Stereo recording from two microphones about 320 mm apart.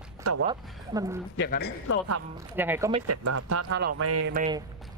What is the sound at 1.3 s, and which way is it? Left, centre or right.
Speech, left.